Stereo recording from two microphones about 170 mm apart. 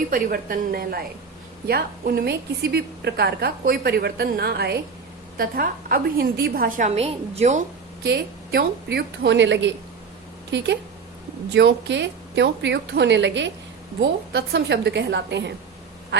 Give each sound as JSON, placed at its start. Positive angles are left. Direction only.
{"t": 0.1, "sound": "a woman's voice", "side_deg": -55}
{"t": 5.4, "sound": "a woman's voice", "side_deg": -60}
{"t": 8.0, "sound": "a woman's voice", "side_deg": -75}
{"t": 11.5, "sound": "a woman's voice", "side_deg": -90}